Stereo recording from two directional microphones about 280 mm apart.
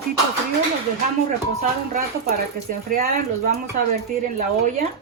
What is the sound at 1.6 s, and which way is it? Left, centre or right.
Speech, right.